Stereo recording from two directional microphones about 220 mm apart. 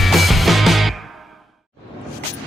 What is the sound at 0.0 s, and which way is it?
Music, centre (ahead or behind).